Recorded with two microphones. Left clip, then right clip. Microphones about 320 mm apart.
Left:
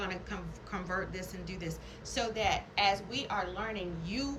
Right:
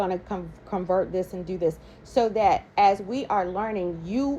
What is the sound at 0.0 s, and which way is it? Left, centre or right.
A woman's voice, centre.